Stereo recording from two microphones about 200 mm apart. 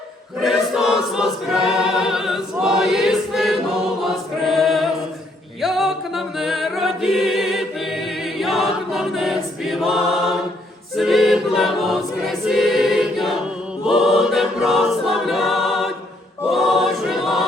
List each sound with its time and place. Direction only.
0.4 s choir: centre (ahead or behind)